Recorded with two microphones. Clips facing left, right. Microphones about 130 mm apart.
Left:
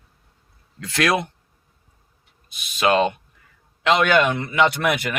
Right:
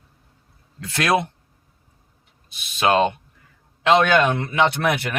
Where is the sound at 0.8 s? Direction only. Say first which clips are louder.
Right 1 dB; 25° right (ahead or behind).